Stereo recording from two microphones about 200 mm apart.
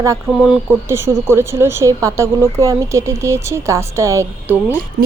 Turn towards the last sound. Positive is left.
turn(degrees=-10)  # may be behind; listen again after turning